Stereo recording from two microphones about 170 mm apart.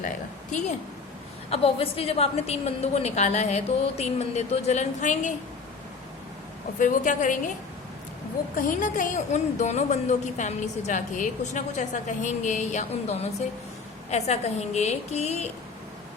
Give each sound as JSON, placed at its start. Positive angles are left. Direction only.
{"t": 1.5, "sound": "a woman's voice", "side_deg": 35}
{"t": 6.7, "sound": "a woman's voice", "side_deg": 50}
{"t": 8.5, "sound": "a woman's voice", "side_deg": 55}